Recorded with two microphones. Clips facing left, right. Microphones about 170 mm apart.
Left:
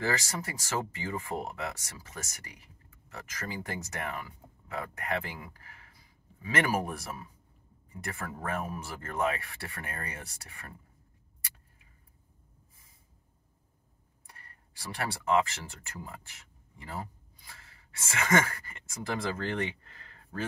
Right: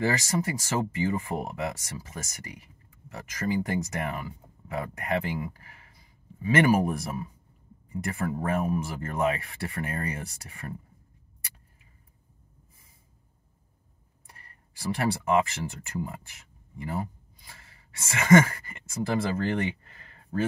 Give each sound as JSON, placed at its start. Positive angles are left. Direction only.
{"t": 0.0, "sound": "speech", "side_deg": -10}
{"t": 14.3, "sound": "speech", "side_deg": -20}
{"t": 16.8, "sound": "a sound", "side_deg": -20}
{"t": 18.0, "sound": "speech", "side_deg": -10}